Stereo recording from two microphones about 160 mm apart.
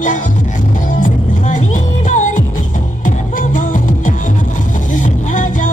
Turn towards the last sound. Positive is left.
turn(degrees=55)  # may be behind; listen again after turning